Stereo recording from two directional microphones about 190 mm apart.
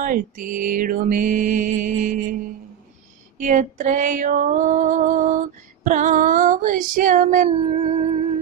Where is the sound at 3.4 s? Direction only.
40° right (ahead or behind).